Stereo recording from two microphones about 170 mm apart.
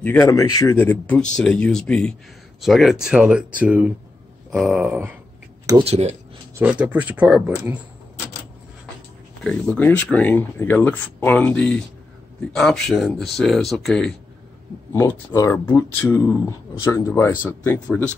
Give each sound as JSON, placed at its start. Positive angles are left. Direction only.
{"t": 0.0, "sound": "speech", "side_deg": 15}
{"t": 5.7, "sound": "speech", "side_deg": -35}
{"t": 6.6, "sound": "speech", "side_deg": -5}
{"t": 9.4, "sound": "speech", "side_deg": 5}
{"t": 14.9, "sound": "speech", "side_deg": 15}
{"t": 17.8, "sound": "speech", "side_deg": 5}